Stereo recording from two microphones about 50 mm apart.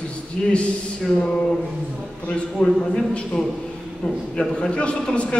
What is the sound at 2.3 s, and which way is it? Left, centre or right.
A man's voice, centre.